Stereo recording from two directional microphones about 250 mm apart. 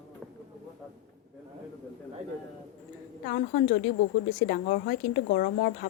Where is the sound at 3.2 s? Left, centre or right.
Left.